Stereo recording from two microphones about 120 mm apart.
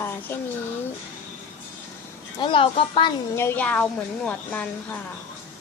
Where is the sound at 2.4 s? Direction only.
45° left (ahead or behind).